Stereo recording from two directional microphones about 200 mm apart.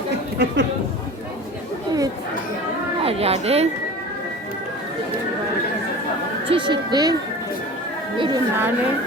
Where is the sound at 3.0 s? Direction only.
30° right (ahead or behind).